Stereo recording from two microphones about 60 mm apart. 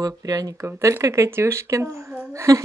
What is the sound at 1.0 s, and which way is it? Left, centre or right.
Speech, right.